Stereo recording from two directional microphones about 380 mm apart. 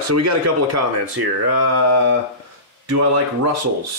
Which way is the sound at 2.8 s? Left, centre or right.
Right.